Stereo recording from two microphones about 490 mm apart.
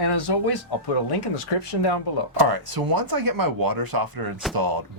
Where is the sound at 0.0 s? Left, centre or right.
Left.